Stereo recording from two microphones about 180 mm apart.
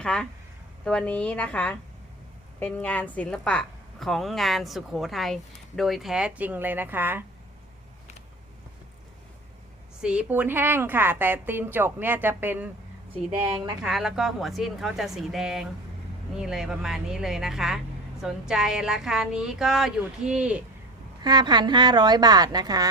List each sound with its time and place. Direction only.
0.0 s a woman's voice: 5° left (ahead or behind); by 7.3 s 10° right (ahead or behind)
10.0 s a woman's voice: 5° right (ahead or behind)
13.8 s a woman's voice: centre (ahead or behind)
21.2 s a woman's voice: 25° right (ahead or behind)